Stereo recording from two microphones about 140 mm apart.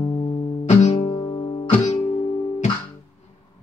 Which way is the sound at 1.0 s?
35° left (ahead or behind).